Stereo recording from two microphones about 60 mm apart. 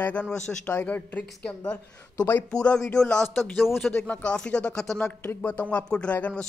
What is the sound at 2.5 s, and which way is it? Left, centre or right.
Speech, centre.